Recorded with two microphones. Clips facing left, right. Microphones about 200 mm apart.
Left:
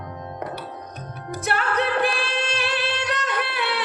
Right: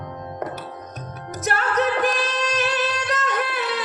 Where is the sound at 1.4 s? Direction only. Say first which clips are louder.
Right 2 dB; 40° right (ahead or behind).